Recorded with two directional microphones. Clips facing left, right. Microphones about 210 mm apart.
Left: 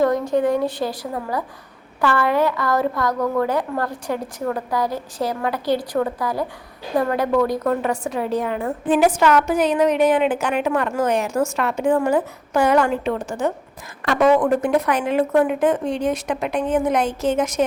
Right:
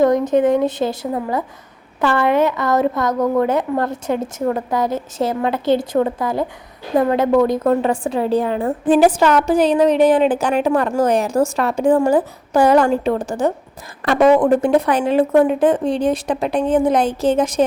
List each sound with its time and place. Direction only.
0.0 s a woman's voice: 20° right (ahead or behind)